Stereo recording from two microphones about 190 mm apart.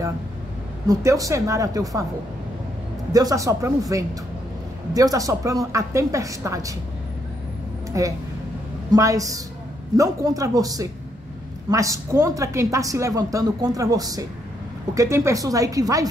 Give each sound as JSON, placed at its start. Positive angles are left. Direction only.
{"t": 0.8, "sound": "speech", "side_deg": -20}
{"t": 3.1, "sound": "speech", "side_deg": -20}
{"t": 4.9, "sound": "speech", "side_deg": -20}
{"t": 8.0, "sound": "speech", "side_deg": -15}